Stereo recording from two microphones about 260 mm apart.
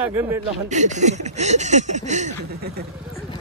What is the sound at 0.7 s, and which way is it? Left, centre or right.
Speech, right.